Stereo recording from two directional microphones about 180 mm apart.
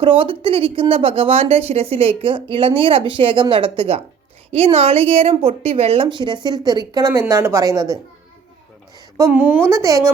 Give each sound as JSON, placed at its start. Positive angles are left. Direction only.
{"t": 0.0, "sound": "speech", "side_deg": -30}
{"t": 9.3, "sound": "a woman's voice", "side_deg": -10}